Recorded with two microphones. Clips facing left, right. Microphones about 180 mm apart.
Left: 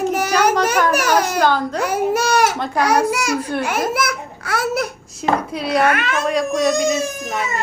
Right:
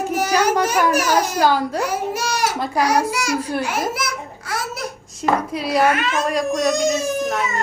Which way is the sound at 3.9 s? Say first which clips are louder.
Left 5 dB; 60° left (ahead or behind).